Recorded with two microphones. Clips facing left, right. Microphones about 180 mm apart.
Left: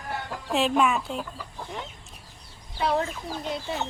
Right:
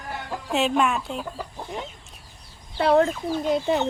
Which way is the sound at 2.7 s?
60° right (ahead or behind).